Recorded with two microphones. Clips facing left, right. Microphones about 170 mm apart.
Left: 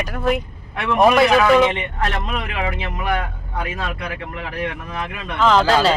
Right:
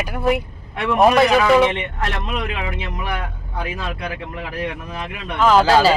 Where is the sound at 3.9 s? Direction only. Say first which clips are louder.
Right 1 dB; 30° right (ahead or behind).